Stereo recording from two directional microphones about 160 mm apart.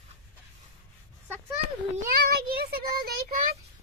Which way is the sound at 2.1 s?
70° right (ahead or behind).